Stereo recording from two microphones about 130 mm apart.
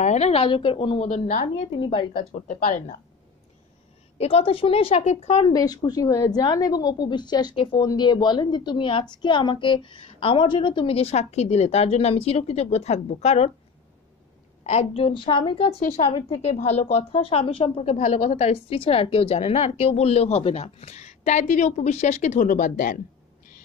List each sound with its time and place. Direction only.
0.0 s a woman's voice: 60° left (ahead or behind)
1.0 s a woman's voice: 70° left (ahead or behind)
1.7 s a woman's voice: 40° left (ahead or behind)
2.3 s speech: 80° left
4.2 s a woman's voice: 45° left (ahead or behind)
5.4 s a woman's voice: 30° left (ahead or behind); by 13.5 s 55° left (ahead or behind)
14.6 s a woman's voice: 55° left (ahead or behind); by 22.9 s 90° left